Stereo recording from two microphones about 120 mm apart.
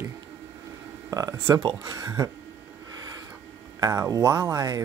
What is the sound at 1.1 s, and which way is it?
Speech, 30° right (ahead or behind).